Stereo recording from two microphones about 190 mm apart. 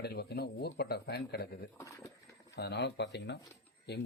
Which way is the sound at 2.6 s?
60° left (ahead or behind).